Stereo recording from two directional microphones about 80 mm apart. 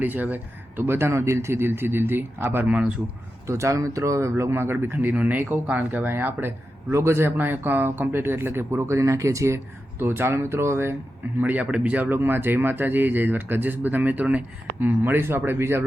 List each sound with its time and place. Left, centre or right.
0.0 s speech: right
3.4 s speech: right
10.0 s speech: right
11.3 s speech: right